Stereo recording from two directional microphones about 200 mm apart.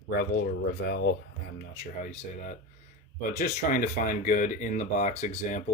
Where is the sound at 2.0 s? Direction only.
40° left (ahead or behind).